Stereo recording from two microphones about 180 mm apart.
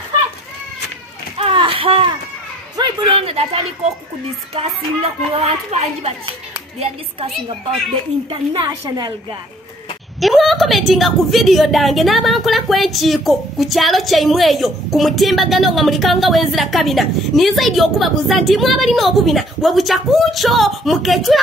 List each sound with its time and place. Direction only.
1.4 s a sound: 30° right (ahead or behind)
4.6 s a woman's voice: 35° right (ahead or behind)
8.3 s a woman's voice: 30° right (ahead or behind)
10.2 s a woman's voice: centre (ahead or behind)